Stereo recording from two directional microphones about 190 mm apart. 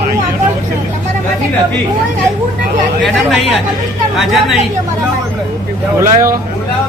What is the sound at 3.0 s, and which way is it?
Speech, centre (ahead or behind).